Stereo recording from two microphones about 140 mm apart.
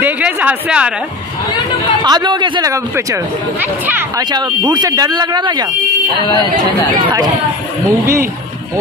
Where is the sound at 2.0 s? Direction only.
30° right (ahead or behind).